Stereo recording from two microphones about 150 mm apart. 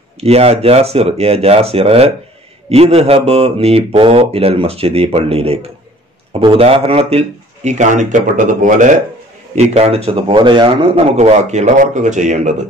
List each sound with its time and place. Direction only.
0.2 s speech: 45° right (ahead or behind); by 8.9 s 60° right (ahead or behind)
9.6 s speech: 45° right (ahead or behind)
11.1 s speech: 50° right (ahead or behind)